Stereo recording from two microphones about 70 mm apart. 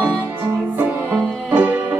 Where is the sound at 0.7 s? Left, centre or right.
Right.